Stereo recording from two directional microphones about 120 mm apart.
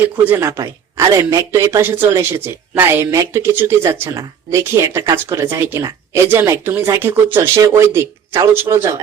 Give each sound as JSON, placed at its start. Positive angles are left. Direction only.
{"t": 0.3, "sound": "speech", "side_deg": -20}